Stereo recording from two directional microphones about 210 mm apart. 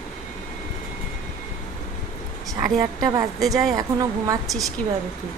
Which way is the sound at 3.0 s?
15° right (ahead or behind).